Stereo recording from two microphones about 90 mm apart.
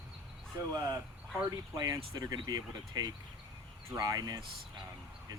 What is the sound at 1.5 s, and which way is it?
Speech, 40° right (ahead or behind).